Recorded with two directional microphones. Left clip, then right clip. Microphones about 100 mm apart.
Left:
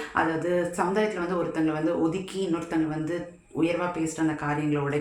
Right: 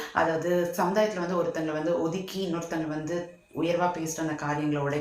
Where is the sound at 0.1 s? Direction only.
30° left (ahead or behind).